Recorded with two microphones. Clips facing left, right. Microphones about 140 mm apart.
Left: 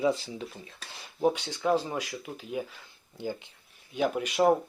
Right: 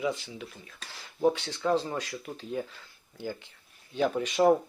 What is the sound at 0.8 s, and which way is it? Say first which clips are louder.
Speech: right 1 dB; 20° left (ahead or behind).